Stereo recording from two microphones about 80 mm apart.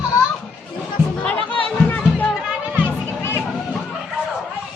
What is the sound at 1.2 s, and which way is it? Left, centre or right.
Music, centre.